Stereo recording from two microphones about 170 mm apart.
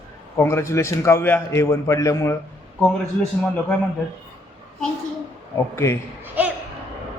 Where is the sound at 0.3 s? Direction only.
15° left (ahead or behind).